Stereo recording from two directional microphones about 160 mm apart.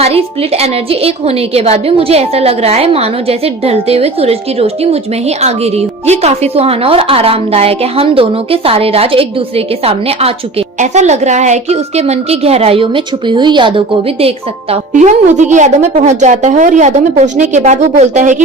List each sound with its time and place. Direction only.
0.0 s a woman's voice: 40° right (ahead or behind)
14.9 s a woman's voice: 50° right (ahead or behind)